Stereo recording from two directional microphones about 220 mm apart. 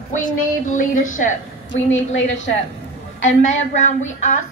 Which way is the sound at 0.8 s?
35° left (ahead or behind).